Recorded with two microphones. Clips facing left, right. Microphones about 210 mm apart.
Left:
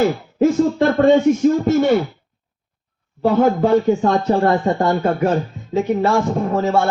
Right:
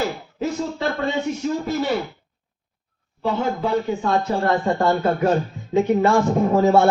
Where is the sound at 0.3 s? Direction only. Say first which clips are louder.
Left 11 dB; 50° left (ahead or behind).